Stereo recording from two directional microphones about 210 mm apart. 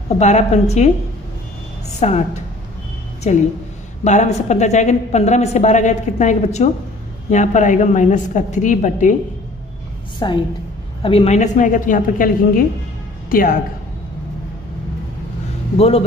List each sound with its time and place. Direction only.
0.2 s a woman's voice: 35° left (ahead or behind)
2.0 s a woman's voice: 30° left (ahead or behind)
3.3 s a woman's voice: 30° left (ahead or behind)
10.1 s a woman's voice: 20° left (ahead or behind); by 13.6 s 40° left (ahead or behind)